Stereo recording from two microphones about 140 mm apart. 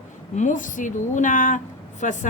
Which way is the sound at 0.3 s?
65° left (ahead or behind).